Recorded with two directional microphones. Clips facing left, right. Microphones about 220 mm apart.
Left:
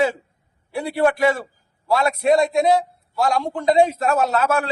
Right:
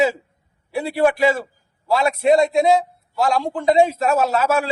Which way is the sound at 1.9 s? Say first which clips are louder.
Right 1 dB; 25° right (ahead or behind).